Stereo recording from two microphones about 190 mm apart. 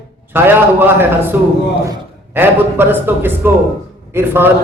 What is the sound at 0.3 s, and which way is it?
A man's voice, 10° right (ahead or behind).